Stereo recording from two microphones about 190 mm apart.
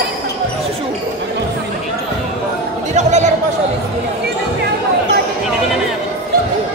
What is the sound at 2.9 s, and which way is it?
Chatter, 40° right (ahead or behind).